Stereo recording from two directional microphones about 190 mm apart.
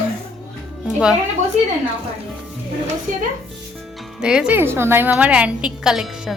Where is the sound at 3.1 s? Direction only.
45° right (ahead or behind).